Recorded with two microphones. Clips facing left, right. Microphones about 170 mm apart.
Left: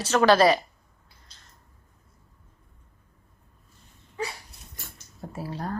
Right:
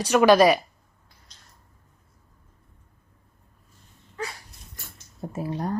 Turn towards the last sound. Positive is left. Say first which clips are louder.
# right 4 dB
turn(degrees=-20)  # may be behind; listen again after turning